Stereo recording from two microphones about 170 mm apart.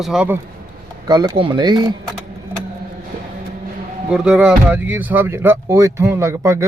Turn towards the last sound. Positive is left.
turn(degrees=-15)  # may be behind; listen again after turning